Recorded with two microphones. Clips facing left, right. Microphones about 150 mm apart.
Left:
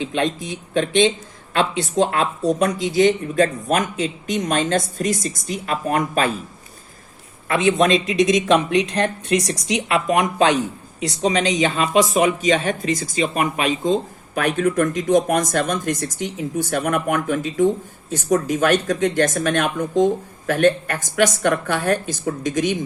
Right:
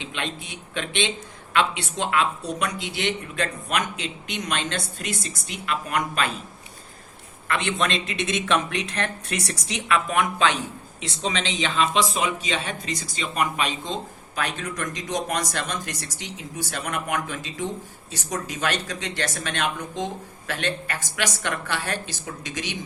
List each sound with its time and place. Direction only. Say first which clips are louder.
0.1 s speech: left 10 dB; 40° left (ahead or behind)
8.2 s speech: left 8 dB; 35° left (ahead or behind)
9.6 s speech: left 9 dB; 30° right (ahead or behind)
9.9 s speech: left 3 dB; 40° left (ahead or behind)